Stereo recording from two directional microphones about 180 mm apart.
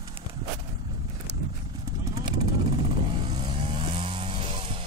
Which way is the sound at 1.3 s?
70° right (ahead or behind).